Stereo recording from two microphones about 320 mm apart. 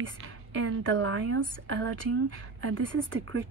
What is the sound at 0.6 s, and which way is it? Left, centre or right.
A woman's voice, right.